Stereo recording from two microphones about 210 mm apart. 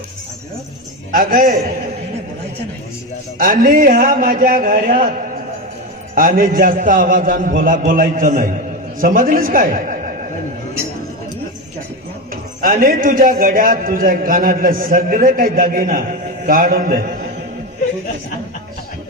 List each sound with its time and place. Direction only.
1.1 s a man's voice: 40° right (ahead or behind)
3.3 s a man's voice: 40° right (ahead or behind)
6.1 s a man's voice: 40° right (ahead or behind)
12.3 s a man's voice: 40° right (ahead or behind)